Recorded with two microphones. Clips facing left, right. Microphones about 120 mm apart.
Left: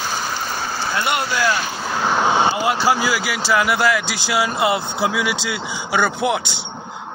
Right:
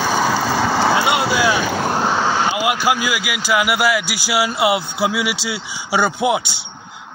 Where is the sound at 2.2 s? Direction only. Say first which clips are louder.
Left 1 dB; 20° left (ahead or behind).